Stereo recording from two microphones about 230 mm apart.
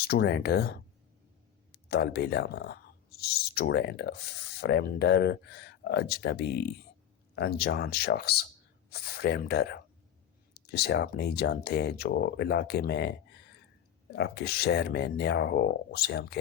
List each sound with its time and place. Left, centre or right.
0.1 s speech: left